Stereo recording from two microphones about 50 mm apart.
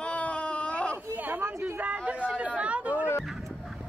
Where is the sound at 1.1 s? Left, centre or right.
Right.